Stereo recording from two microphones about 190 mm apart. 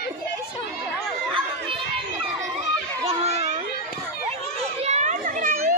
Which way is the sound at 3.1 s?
35° right (ahead or behind).